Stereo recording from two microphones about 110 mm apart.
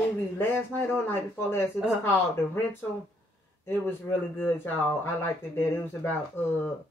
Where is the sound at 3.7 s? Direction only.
20° left (ahead or behind).